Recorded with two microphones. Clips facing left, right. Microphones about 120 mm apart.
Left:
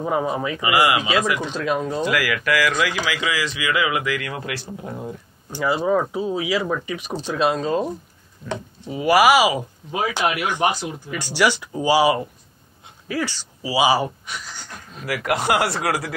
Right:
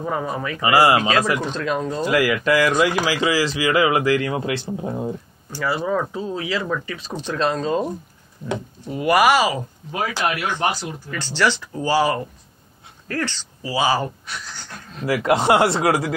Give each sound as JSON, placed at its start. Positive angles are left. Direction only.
{"t": 0.0, "sound": "speech", "side_deg": 15}
{"t": 0.6, "sound": "speech", "side_deg": -35}
{"t": 1.4, "sound": "speech", "side_deg": 5}
{"t": 2.0, "sound": "speech", "side_deg": -25}
{"t": 5.5, "sound": "speech", "side_deg": 20}
{"t": 8.9, "sound": "speech", "side_deg": 0}
{"t": 15.0, "sound": "speech", "side_deg": -25}